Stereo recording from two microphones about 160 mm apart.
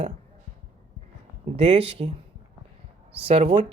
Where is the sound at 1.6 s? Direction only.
40° right (ahead or behind).